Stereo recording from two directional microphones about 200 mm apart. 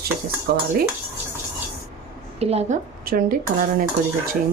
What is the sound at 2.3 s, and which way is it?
Speech, 30° right (ahead or behind).